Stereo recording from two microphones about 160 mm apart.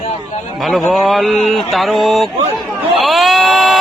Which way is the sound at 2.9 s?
Centre (ahead or behind).